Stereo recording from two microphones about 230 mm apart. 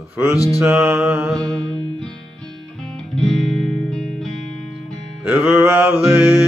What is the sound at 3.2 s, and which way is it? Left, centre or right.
Music, centre.